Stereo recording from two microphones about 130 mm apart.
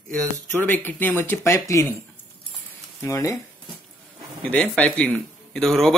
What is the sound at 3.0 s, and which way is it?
Speech, 20° left (ahead or behind).